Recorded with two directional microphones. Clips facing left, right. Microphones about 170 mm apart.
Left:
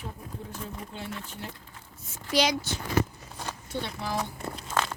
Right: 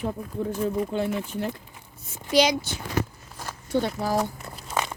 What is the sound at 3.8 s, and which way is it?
Speech, 40° right (ahead or behind).